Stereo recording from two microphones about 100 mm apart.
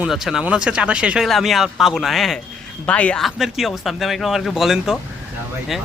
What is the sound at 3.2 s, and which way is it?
A man's voice, 5° right (ahead or behind).